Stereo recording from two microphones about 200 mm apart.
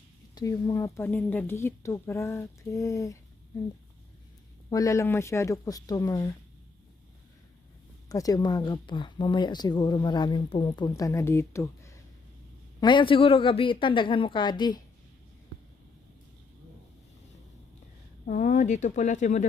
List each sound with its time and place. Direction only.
0.3 s speech: 15° left (ahead or behind)
4.7 s speech: 15° left (ahead or behind)
8.1 s speech: 20° left (ahead or behind)
18.3 s speech: 40° left (ahead or behind)